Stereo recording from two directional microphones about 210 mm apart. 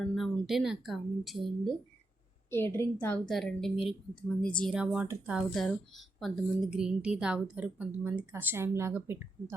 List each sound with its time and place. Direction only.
0.1 s speech: centre (ahead or behind)
2.5 s a woman's voice: 10° left (ahead or behind); by 9.2 s 10° right (ahead or behind)